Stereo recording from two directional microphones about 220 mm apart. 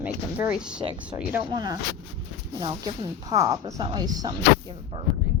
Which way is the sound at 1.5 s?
20° right (ahead or behind).